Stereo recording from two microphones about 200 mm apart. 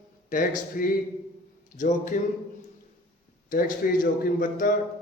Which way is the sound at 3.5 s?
45° left (ahead or behind).